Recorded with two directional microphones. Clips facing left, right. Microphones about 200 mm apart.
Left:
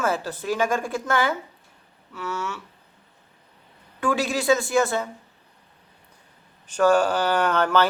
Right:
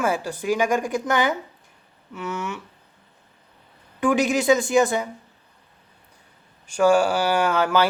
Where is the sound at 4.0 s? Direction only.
20° right (ahead or behind).